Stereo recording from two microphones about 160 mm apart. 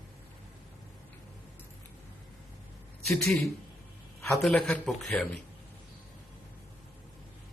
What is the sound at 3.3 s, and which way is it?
A man's voice, centre (ahead or behind).